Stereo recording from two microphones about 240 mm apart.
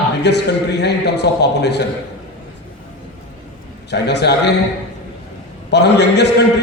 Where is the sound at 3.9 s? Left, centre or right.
Left.